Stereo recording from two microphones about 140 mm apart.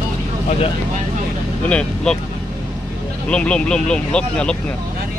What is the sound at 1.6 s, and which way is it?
Speech, 5° left (ahead or behind).